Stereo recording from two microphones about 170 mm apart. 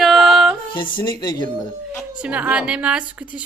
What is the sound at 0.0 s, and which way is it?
Music, centre (ahead or behind).